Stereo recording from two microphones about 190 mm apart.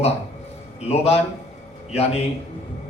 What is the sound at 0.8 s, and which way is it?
A man's voice, 35° left (ahead or behind).